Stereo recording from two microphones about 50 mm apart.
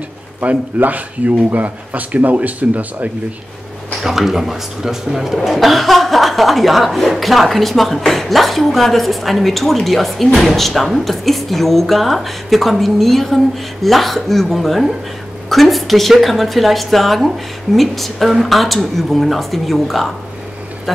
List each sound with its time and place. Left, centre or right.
0.4 s speech: right
4.0 s speech: centre